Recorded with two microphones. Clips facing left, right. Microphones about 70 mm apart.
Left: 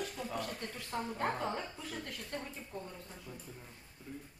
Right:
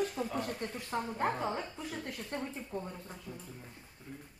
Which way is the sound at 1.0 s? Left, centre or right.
Centre.